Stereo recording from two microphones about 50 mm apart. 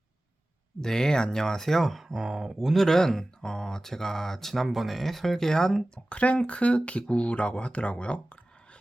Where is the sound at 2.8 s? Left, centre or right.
Centre.